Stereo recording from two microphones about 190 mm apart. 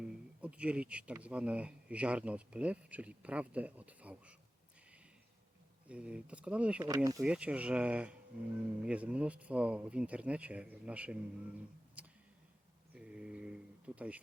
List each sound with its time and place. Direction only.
0.4 s speech: 5° right (ahead or behind)
5.9 s speech: 5° right (ahead or behind)
6.8 s speech: 20° right (ahead or behind)
7.2 s speech: 5° right (ahead or behind)
12.9 s a sound: 5° right (ahead or behind)